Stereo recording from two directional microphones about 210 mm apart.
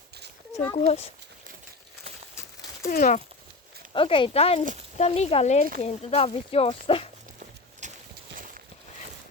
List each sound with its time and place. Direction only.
0.5 s speech: 15° left (ahead or behind)
0.8 s speech: 30° left (ahead or behind)
2.3 s horse: 15° left (ahead or behind)
2.9 s speech: 35° left (ahead or behind)
3.9 s speech: 25° left (ahead or behind)
7.8 s clip-clop: 35° right (ahead or behind)